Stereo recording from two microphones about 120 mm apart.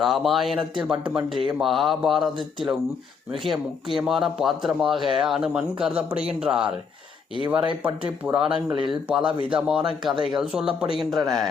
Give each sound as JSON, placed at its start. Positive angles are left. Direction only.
{"t": 0.0, "sound": "speech", "side_deg": 0}
{"t": 3.9, "sound": "speech", "side_deg": -5}
{"t": 7.9, "sound": "speech", "side_deg": -15}
{"t": 8.7, "sound": "speech", "side_deg": -45}
{"t": 9.0, "sound": "speech", "side_deg": -5}